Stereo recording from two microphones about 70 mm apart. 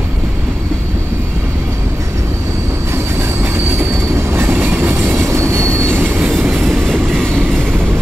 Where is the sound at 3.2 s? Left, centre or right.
Right.